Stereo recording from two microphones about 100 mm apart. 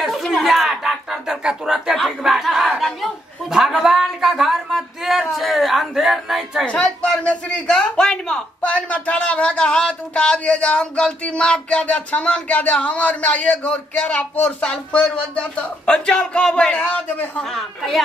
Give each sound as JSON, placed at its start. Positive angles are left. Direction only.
{"t": 0.0, "sound": "speech", "side_deg": 0}
{"t": 6.6, "sound": "speech", "side_deg": 10}
{"t": 17.6, "sound": "speech", "side_deg": 0}